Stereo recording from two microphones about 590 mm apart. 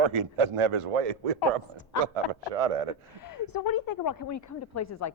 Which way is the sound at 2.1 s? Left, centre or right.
Right.